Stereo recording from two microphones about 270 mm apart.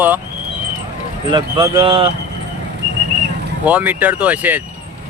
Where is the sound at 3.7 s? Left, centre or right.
Centre.